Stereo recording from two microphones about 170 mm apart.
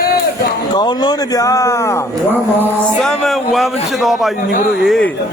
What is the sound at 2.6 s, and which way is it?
Speech, 5° left (ahead or behind).